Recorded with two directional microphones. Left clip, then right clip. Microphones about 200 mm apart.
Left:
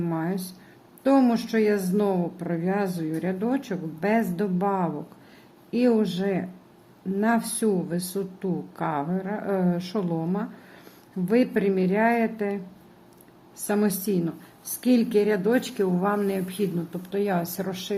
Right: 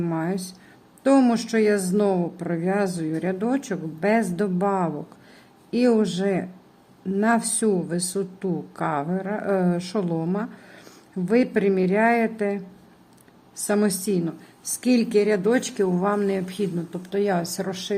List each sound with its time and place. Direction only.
0.0 s a woman's voice: 15° right (ahead or behind)
13.7 s a woman's voice: 10° right (ahead or behind)